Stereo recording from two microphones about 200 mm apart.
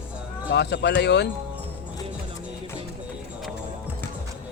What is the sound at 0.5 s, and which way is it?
Speech, 55° left (ahead or behind).